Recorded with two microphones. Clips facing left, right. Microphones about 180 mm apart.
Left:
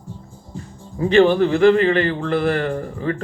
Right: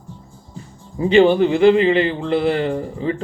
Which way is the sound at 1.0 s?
15° right (ahead or behind).